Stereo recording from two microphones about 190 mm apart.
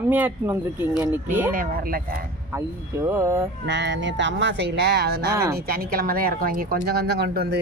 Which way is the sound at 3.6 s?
70° right (ahead or behind).